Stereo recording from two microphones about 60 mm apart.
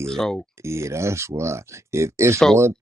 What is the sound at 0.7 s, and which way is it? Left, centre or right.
Speech, right.